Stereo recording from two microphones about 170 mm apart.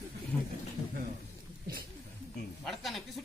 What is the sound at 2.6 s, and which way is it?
Speech, centre (ahead or behind).